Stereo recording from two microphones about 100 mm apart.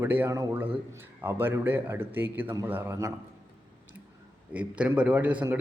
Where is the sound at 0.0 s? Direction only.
20° right (ahead or behind).